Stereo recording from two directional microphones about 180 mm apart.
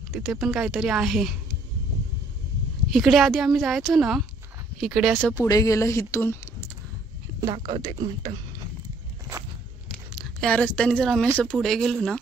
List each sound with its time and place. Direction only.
0.1 s speech: centre (ahead or behind)
2.9 s speech: centre (ahead or behind)
5.3 s speech: 20° left (ahead or behind)
7.3 s speech: 20° right (ahead or behind)
9.8 s a sound: centre (ahead or behind)
11.3 s speech: 5° left (ahead or behind)